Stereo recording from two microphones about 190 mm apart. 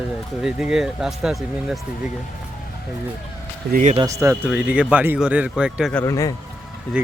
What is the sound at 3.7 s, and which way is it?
Speech, 40° right (ahead or behind).